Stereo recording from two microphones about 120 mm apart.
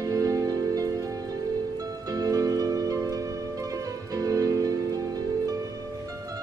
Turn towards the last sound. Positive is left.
turn(degrees=-30)  # may be behind; listen again after turning